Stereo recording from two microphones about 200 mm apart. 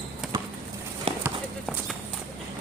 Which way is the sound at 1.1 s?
25° right (ahead or behind).